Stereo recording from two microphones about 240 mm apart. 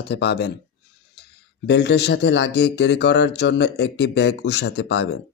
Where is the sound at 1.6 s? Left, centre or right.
Left.